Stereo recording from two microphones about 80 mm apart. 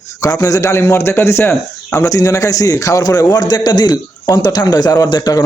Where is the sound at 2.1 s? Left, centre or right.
Left.